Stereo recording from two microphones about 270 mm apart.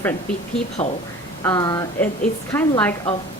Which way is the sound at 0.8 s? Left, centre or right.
Left.